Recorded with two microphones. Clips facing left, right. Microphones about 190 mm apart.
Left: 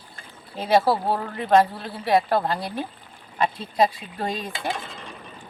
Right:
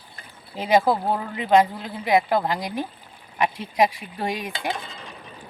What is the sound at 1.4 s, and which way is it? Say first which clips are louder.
A woman's voice: even; 15° right (ahead or behind).